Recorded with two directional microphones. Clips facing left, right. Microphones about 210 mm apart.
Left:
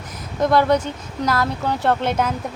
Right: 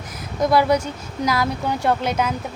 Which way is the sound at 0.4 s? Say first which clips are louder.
Left 1 dB; 10° right (ahead or behind).